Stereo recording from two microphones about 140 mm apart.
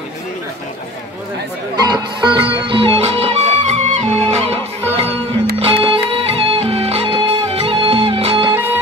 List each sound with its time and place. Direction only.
1.8 s music: 30° right (ahead or behind)